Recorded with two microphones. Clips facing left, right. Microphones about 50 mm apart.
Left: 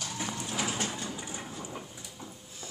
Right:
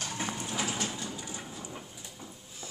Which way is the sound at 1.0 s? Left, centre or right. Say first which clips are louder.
Left 1 dB; left.